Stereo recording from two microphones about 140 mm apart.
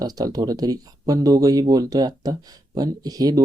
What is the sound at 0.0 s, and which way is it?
Speech, 25° right (ahead or behind).